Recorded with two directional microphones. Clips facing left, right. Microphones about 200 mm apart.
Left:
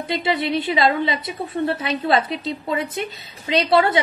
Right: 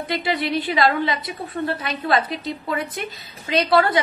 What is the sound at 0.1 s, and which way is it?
A woman's voice, 25° left (ahead or behind).